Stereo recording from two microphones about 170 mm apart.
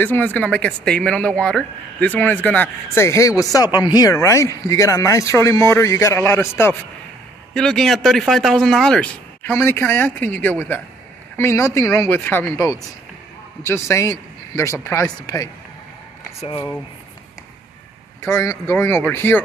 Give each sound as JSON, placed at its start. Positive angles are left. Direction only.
{"t": 0.0, "sound": "speech", "side_deg": 10}
{"t": 7.5, "sound": "speech", "side_deg": 5}
{"t": 18.2, "sound": "speech", "side_deg": 15}